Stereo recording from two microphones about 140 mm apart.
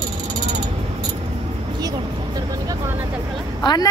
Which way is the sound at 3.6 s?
30° left (ahead or behind).